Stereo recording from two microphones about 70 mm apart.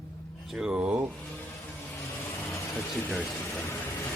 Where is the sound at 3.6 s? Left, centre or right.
Left.